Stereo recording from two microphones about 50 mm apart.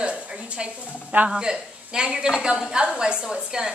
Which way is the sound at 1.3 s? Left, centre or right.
Centre.